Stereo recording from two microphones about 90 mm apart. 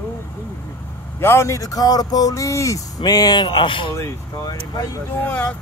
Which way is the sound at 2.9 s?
45° left (ahead or behind).